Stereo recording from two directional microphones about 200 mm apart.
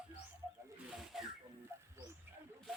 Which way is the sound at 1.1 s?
Centre (ahead or behind).